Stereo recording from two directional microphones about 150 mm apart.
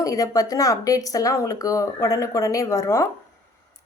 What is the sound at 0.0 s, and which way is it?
A woman's voice, 25° left (ahead or behind).